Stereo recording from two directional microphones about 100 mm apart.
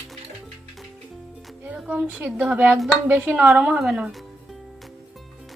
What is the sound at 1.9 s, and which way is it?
Speech, 15° right (ahead or behind).